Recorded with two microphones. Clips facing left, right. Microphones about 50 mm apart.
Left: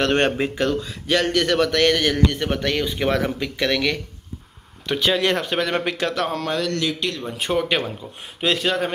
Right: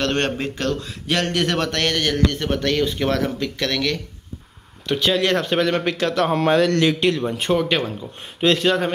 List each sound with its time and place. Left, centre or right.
0.0 s a man's voice: centre
0.7 s a man's voice: centre
6.4 s speech: right
7.0 s speech: right
7.3 s speech: centre